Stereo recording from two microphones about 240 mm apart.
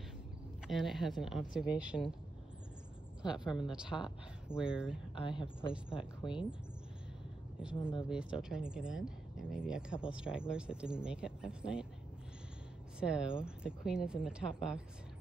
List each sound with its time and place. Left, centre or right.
0.7 s speech: centre
3.2 s a woman's voice: centre
5.1 s a woman's voice: left
8.1 s speech: centre
13.0 s speech: centre